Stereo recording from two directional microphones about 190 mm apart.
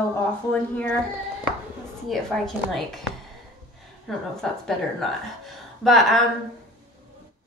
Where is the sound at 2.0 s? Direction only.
Centre (ahead or behind).